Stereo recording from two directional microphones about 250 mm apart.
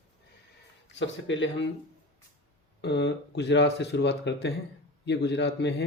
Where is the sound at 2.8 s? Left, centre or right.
Left.